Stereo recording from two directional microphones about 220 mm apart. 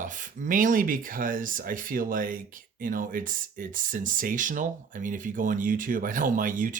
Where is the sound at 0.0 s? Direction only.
40° right (ahead or behind).